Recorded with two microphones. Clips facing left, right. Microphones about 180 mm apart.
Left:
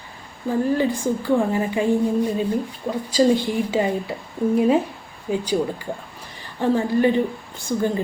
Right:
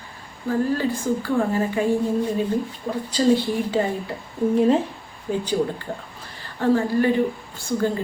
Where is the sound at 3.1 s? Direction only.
15° left (ahead or behind).